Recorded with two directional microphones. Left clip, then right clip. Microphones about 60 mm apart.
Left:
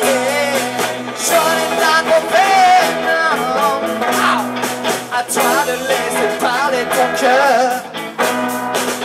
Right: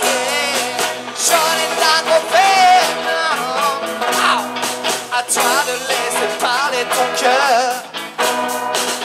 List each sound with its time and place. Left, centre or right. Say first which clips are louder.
0.0 s music: left 2 dB; centre